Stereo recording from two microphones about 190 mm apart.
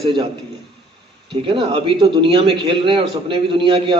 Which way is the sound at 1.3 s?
25° right (ahead or behind).